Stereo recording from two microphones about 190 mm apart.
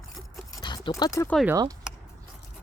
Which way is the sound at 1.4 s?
20° right (ahead or behind).